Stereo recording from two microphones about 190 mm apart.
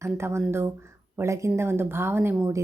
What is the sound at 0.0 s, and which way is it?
Speech, 15° right (ahead or behind).